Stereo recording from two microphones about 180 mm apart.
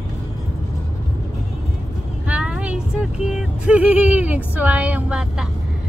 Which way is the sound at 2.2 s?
5° right (ahead or behind).